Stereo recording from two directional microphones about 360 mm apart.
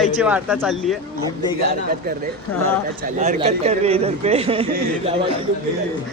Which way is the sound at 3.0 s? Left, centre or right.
Centre.